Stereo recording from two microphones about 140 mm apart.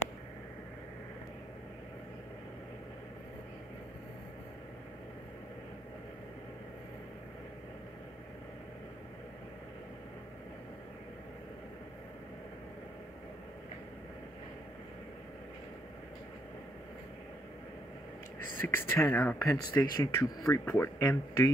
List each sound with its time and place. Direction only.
18.6 s speech: 15° left (ahead or behind)